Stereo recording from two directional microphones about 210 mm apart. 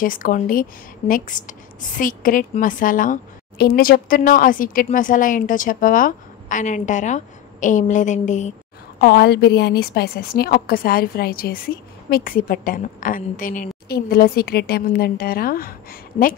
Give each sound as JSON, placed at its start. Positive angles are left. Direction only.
{"t": 0.0, "sound": "a woman's voice", "side_deg": 40}
{"t": 9.0, "sound": "a woman's voice", "side_deg": 50}